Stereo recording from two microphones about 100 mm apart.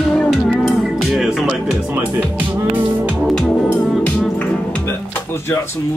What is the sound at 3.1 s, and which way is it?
Music, 5° left (ahead or behind).